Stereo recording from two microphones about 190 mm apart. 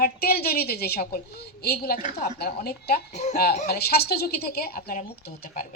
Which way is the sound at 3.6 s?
55° left (ahead or behind).